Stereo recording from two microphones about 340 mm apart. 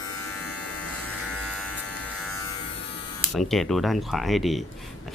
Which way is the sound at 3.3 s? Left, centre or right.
Centre.